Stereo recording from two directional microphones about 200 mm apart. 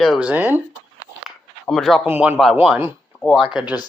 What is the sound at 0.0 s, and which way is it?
Speech, centre (ahead or behind).